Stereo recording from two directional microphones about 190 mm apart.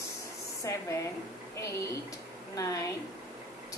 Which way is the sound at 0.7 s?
15° left (ahead or behind).